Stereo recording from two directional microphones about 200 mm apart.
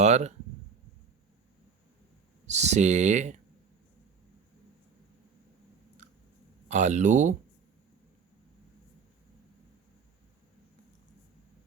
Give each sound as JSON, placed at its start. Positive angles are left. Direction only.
{"t": 0.0, "sound": "speech", "side_deg": -35}
{"t": 2.5, "sound": "speech", "side_deg": -35}
{"t": 6.0, "sound": "chewing", "side_deg": -40}
{"t": 6.7, "sound": "speech", "side_deg": -35}